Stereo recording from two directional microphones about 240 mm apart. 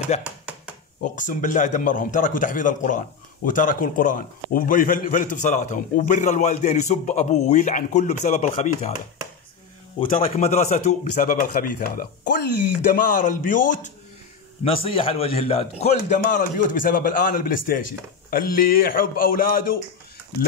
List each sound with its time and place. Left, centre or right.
0.2 s a sound: centre
1.0 s a man's voice: left
10.0 s a man's voice: left